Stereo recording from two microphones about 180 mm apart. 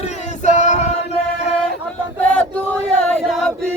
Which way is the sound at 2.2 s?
10° left (ahead or behind).